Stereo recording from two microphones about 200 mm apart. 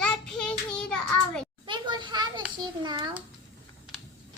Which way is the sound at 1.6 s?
25° right (ahead or behind).